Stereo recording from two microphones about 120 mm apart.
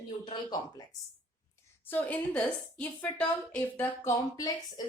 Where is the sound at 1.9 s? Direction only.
15° left (ahead or behind).